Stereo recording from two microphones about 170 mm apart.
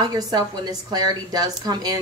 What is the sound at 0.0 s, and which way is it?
A woman's voice, 25° right (ahead or behind).